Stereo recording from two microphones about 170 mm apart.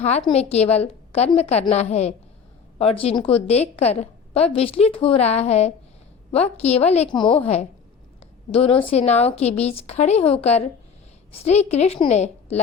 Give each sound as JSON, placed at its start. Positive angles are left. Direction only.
{"t": 0.0, "sound": "a woman's voice", "side_deg": 40}